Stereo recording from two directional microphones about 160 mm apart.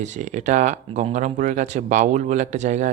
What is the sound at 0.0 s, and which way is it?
Speech, 50° right (ahead or behind).